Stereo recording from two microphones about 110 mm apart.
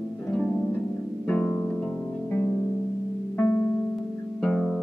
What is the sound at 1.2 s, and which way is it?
Music, 10° left (ahead or behind).